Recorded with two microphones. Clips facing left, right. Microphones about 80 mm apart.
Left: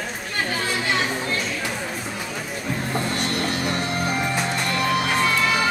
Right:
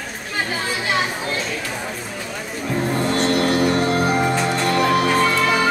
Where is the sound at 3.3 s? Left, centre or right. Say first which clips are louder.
Right 7 dB; right.